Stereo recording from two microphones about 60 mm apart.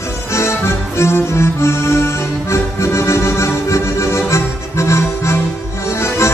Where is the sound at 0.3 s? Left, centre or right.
Left.